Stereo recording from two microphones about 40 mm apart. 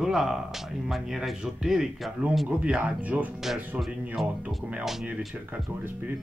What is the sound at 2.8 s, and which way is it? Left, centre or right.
Speech, right.